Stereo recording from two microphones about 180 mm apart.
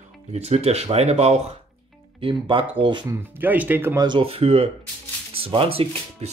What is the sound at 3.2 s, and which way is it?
Speech, 10° right (ahead or behind).